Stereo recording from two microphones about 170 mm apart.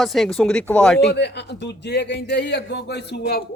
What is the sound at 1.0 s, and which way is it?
A man's voice, 90° left.